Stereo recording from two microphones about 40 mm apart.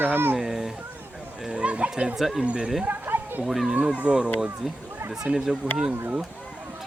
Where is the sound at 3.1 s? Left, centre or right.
Right.